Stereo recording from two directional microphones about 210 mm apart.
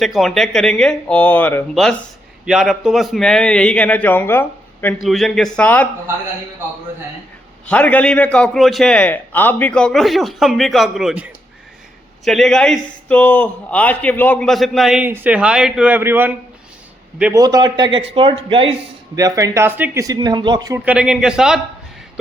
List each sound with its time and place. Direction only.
0.0 s a man's voice: centre (ahead or behind)
7.7 s a man's voice: 5° left (ahead or behind)
17.4 s a man's voice: 20° right (ahead or behind)
20.8 s a man's voice: 5° right (ahead or behind)